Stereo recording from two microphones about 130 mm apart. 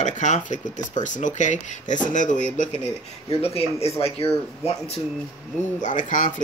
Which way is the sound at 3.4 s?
50° left (ahead or behind).